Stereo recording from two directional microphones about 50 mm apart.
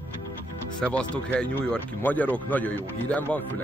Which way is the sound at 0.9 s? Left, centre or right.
Left.